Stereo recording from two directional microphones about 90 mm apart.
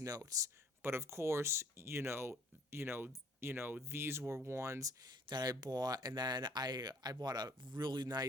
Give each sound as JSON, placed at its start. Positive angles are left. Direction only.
{"t": 0.0, "sound": "speech", "side_deg": -40}
{"t": 0.8, "sound": "speech", "side_deg": -25}
{"t": 5.3, "sound": "speech", "side_deg": -50}